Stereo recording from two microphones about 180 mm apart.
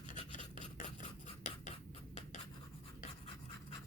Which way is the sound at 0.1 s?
45° left (ahead or behind).